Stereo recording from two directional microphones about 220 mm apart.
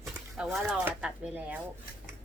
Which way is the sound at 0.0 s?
Centre (ahead or behind).